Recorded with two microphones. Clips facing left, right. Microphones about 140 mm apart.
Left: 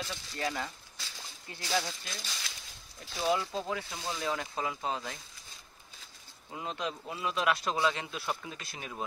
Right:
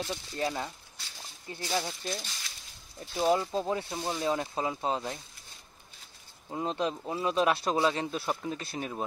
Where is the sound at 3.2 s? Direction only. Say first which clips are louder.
Right 4 dB; 35° right (ahead or behind).